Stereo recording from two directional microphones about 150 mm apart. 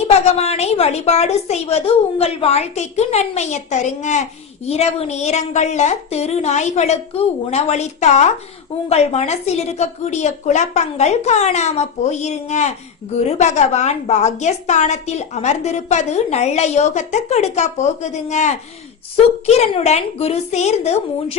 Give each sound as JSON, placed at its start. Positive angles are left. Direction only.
{"t": 0.1, "sound": "a woman's voice", "side_deg": 45}